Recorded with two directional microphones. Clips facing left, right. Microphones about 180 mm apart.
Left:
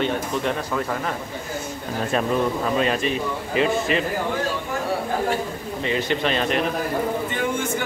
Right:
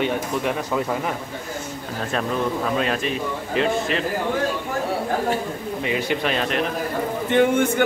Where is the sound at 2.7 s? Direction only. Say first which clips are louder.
Left 1 dB; centre (ahead or behind).